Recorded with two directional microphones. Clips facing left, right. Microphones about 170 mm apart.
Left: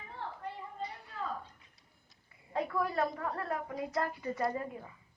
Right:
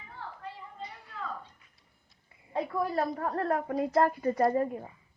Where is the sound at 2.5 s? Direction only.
25° right (ahead or behind).